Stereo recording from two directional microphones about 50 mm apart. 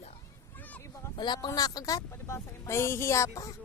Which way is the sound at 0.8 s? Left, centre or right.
Left.